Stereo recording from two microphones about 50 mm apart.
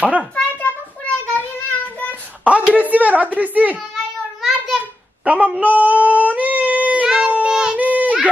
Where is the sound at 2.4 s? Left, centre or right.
Right.